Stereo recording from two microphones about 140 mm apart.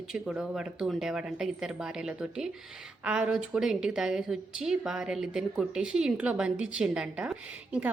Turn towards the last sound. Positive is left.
turn(degrees=-10)  # may be behind; listen again after turning